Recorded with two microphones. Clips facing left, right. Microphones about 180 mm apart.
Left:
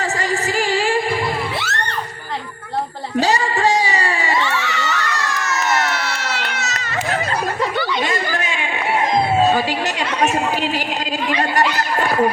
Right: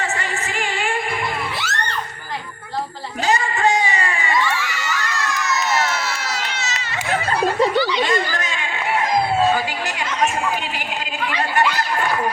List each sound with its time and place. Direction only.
0.0 s music: 35° left (ahead or behind)
3.2 s a sound: 35° left (ahead or behind)
4.4 s children shouting: 65° left (ahead or behind)
6.4 s baby cry: 60° left (ahead or behind)
7.8 s chatter: 50° left (ahead or behind)
8.3 s a sound: 15° left (ahead or behind)